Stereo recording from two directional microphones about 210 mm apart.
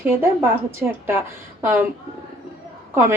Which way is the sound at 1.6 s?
10° right (ahead or behind).